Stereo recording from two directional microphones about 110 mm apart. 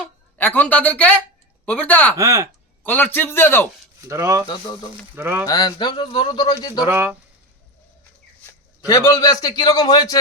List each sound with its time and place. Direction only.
0.0 s a woman's voice: 15° left (ahead or behind)
2.1 s speech: 30° right (ahead or behind)
2.8 s a man's voice: 15° left (ahead or behind)
4.0 s speech: 30° right (ahead or behind)
5.5 s a man's voice: 40° left (ahead or behind)
6.8 s speech: 20° right (ahead or behind)
8.9 s a man's voice: 35° left (ahead or behind)